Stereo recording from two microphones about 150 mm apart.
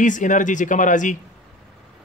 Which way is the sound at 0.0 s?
60° left (ahead or behind).